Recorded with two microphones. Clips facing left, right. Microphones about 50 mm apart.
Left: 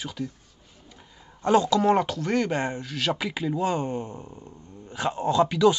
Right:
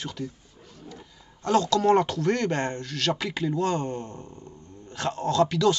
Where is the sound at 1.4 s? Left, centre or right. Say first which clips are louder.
Left 2 dB; centre.